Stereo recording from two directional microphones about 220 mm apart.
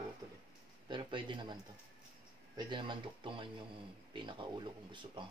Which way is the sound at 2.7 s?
20° right (ahead or behind).